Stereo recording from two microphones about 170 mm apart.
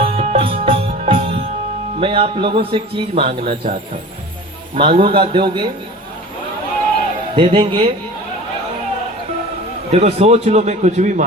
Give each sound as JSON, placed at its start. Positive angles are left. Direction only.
{"t": 0.0, "sound": "music", "side_deg": -40}
{"t": 2.0, "sound": "speech", "side_deg": -30}
{"t": 3.5, "sound": "speech", "side_deg": -50}
{"t": 4.7, "sound": "a man's voice", "side_deg": -35}
{"t": 7.3, "sound": "speech", "side_deg": -30}
{"t": 9.9, "sound": "speech", "side_deg": -40}